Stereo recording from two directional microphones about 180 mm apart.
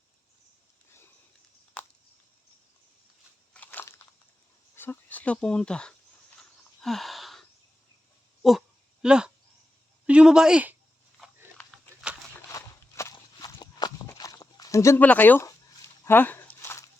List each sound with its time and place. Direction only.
3.5 s biting: 10° left (ahead or behind)
4.7 s speech: 10° left (ahead or behind)
6.8 s a sound: centre (ahead or behind)
10.1 s speech: 5° right (ahead or behind)
12.3 s walk: 15° left (ahead or behind)